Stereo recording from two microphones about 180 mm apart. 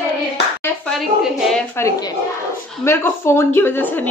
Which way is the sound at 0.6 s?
5° left (ahead or behind).